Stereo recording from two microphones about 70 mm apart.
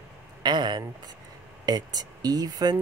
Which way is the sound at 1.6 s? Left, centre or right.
Right.